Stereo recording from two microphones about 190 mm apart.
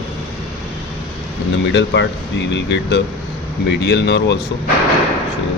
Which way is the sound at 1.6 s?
75° left (ahead or behind).